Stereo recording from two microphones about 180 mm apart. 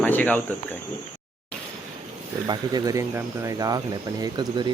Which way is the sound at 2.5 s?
20° right (ahead or behind).